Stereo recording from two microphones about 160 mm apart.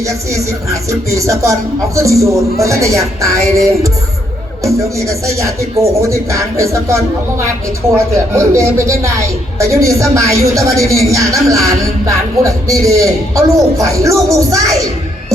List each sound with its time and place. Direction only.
0.0 s speech: 20° right (ahead or behind)